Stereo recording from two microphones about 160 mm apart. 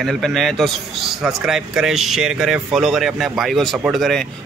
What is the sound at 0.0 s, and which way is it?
Speech, centre (ahead or behind).